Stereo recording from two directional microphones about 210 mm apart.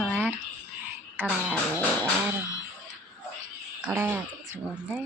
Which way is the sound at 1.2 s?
10° right (ahead or behind).